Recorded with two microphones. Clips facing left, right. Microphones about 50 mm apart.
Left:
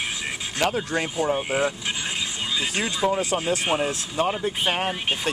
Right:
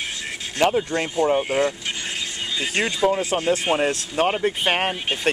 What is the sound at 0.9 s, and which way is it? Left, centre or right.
Speech, centre.